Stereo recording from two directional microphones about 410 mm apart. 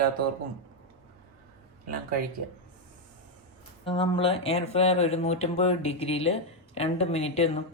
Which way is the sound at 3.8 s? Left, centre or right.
Centre.